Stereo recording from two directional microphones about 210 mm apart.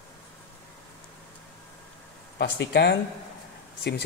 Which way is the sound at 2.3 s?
55° left (ahead or behind).